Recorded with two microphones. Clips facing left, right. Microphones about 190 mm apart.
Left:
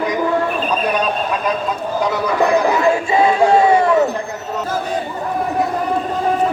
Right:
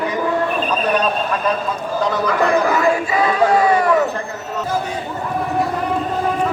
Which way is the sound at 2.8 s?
25° left (ahead or behind).